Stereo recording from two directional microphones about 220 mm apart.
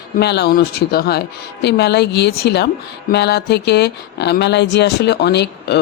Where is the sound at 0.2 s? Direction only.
50° left (ahead or behind).